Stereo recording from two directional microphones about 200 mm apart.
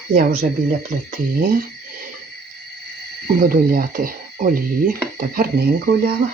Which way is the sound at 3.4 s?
45° right (ahead or behind).